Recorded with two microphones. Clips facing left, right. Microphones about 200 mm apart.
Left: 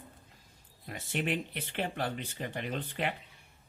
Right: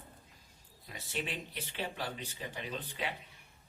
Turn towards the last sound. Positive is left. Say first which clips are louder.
# left 5 dB
turn(degrees=55)  # may be behind; listen again after turning